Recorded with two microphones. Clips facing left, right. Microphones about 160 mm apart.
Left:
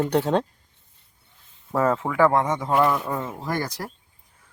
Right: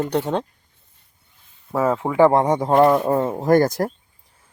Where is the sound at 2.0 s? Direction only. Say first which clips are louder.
Right 9 dB; 25° right (ahead or behind); by 3.9 s 50° right (ahead or behind).